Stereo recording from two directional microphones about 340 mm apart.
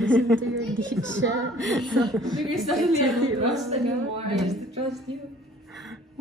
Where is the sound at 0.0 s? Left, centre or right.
Centre.